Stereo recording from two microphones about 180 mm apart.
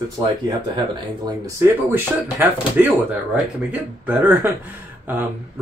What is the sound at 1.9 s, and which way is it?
Speech, 10° right (ahead or behind).